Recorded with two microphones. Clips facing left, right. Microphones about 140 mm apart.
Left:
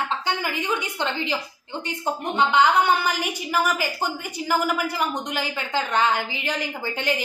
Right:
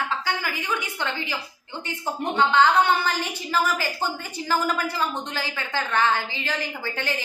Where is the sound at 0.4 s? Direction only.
20° left (ahead or behind).